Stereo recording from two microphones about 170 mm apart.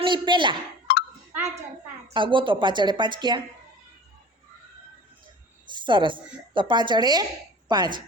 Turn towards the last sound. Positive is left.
turn(degrees=-25)  # may be behind; listen again after turning